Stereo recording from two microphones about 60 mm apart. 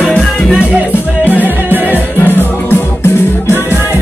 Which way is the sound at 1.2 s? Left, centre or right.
Right.